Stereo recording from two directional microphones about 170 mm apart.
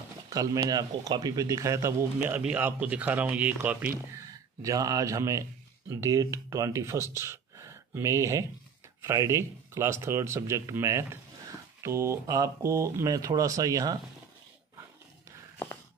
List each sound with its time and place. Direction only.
0.3 s speech: 20° right (ahead or behind)
4.6 s speech: 20° right (ahead or behind)